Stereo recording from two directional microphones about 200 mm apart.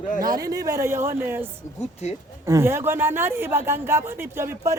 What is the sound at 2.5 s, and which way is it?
Speech, 15° right (ahead or behind).